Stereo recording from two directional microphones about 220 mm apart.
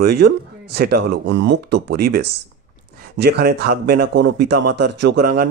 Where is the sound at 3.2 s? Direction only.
45° right (ahead or behind).